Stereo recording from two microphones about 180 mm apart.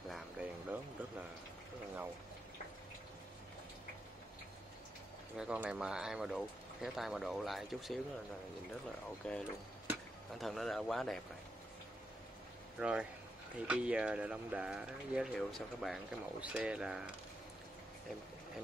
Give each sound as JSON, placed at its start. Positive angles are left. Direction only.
{"t": 0.1, "sound": "a sound", "side_deg": -5}
{"t": 5.4, "sound": "speech", "side_deg": -5}
{"t": 9.2, "sound": "speech", "side_deg": 5}
{"t": 12.7, "sound": "speech", "side_deg": -5}